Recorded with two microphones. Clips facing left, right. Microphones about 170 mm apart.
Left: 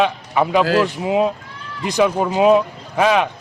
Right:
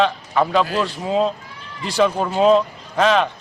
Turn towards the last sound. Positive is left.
turn(degrees=10)  # may be behind; listen again after turning